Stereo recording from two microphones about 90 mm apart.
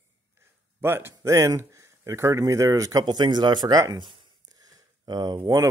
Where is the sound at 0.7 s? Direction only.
25° right (ahead or behind); by 3.8 s 50° right (ahead or behind).